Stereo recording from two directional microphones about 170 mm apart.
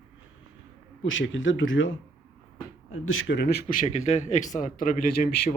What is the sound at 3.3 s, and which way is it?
A man's voice, 75° left (ahead or behind).